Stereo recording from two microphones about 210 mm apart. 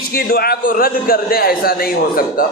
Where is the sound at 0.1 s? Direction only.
45° left (ahead or behind).